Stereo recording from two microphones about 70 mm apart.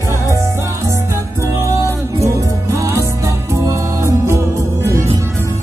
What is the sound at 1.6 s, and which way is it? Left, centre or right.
Music, right.